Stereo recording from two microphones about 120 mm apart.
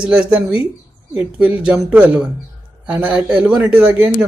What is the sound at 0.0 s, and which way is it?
Speech, 10° right (ahead or behind).